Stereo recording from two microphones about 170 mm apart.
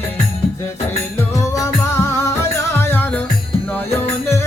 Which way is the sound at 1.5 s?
15° left (ahead or behind).